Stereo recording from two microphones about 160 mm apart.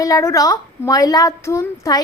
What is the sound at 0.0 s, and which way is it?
A woman's voice, 20° left (ahead or behind).